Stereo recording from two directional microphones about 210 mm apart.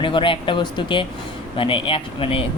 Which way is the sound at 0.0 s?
25° left (ahead or behind).